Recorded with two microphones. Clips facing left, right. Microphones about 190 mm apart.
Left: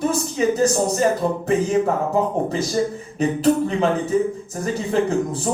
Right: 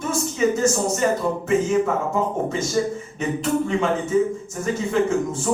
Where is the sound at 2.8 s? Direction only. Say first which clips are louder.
Left 3 dB; 35° left (ahead or behind).